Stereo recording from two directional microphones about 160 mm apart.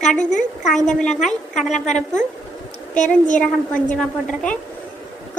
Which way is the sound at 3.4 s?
5° left (ahead or behind).